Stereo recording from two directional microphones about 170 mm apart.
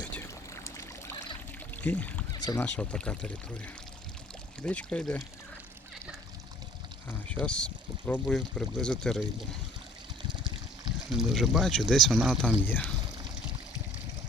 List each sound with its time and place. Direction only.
0.0 s pour: 10° left (ahead or behind)
1.7 s speech: 10° left (ahead or behind)
2.3 s a sound: 25° left (ahead or behind)
2.6 s speech: 10° left (ahead or behind)
4.6 s speech: 5° left (ahead or behind)
7.1 s speech: 5° left (ahead or behind)
11.1 s speech: centre (ahead or behind)